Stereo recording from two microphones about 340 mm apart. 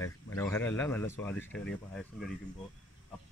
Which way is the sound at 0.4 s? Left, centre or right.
Centre.